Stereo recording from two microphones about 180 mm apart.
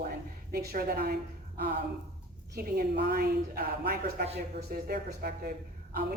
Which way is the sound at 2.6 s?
60° right (ahead or behind).